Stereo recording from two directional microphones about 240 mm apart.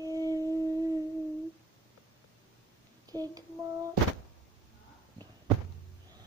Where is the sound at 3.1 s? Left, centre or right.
Centre.